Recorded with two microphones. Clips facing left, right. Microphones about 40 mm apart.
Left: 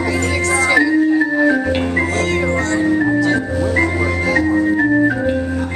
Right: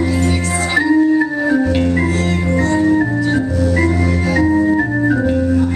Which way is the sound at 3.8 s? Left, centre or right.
Centre.